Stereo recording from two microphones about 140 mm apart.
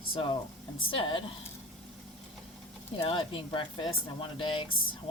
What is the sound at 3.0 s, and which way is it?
Speech, 40° left (ahead or behind).